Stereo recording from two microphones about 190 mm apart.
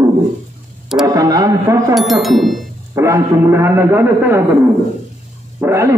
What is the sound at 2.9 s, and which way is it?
A man's voice, 15° right (ahead or behind).